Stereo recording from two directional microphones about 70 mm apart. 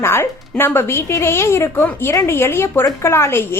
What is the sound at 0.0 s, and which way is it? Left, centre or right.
A woman's voice, left.